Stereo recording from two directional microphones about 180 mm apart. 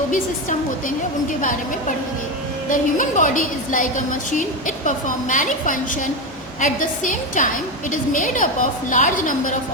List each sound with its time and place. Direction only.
0.1 s a woman's voice: 45° left (ahead or behind)
2.6 s a woman's voice: 45° left (ahead or behind)